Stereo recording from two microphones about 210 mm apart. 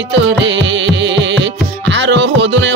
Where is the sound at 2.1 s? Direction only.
60° right (ahead or behind).